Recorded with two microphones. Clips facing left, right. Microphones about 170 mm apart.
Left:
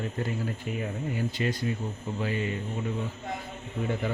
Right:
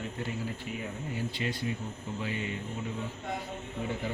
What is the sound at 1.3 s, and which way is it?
Speech, 45° left (ahead or behind).